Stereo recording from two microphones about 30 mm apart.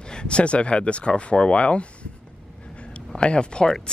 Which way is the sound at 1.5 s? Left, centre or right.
Left.